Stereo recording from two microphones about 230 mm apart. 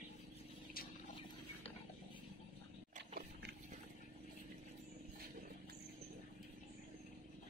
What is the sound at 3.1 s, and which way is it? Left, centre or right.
Pig, right.